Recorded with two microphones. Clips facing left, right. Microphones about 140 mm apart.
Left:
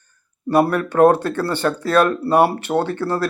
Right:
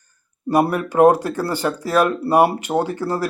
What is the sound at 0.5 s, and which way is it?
A man's voice, 10° right (ahead or behind).